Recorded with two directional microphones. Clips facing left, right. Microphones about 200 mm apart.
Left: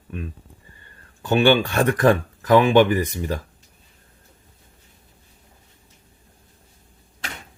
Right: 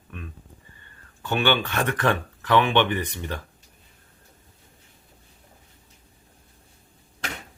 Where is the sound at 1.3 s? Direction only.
35° left (ahead or behind).